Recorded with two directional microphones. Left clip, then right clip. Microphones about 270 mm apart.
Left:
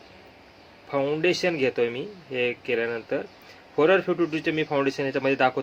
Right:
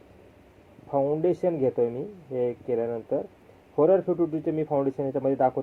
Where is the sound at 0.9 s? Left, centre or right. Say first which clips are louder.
Left 1 dB; left.